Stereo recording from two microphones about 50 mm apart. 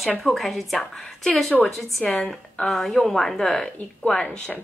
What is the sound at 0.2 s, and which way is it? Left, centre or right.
Speech, centre.